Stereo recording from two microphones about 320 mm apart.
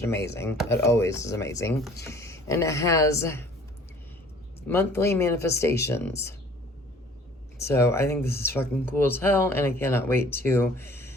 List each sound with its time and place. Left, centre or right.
0.3 s speech: centre
4.6 s speech: centre
7.6 s speech: centre